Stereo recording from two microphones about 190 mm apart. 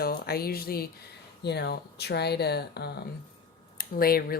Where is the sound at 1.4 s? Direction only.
60° left (ahead or behind).